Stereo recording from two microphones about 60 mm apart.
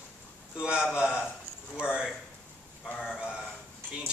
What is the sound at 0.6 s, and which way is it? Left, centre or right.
Speech, centre.